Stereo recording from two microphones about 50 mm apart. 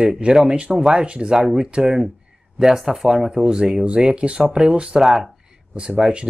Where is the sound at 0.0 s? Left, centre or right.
Centre.